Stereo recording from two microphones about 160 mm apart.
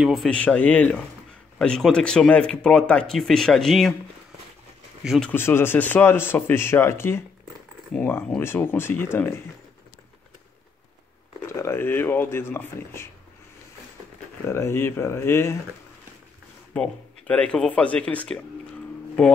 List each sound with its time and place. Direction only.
0.0 s speech: centre (ahead or behind)
5.0 s speech: centre (ahead or behind)
5.3 s speech: 15° left (ahead or behind)
11.4 s speech: 15° left (ahead or behind)
14.4 s speech: 15° left (ahead or behind)
16.7 s speech: 5° left (ahead or behind)